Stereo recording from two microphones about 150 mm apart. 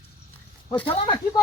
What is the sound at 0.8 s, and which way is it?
Speech, 30° left (ahead or behind).